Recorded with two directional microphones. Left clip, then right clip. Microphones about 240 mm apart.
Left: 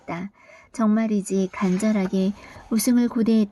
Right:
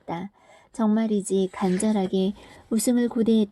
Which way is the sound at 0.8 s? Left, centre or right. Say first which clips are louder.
Left 1 dB; centre.